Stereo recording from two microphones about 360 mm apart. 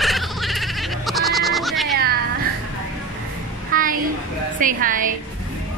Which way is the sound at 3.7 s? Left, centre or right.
Right.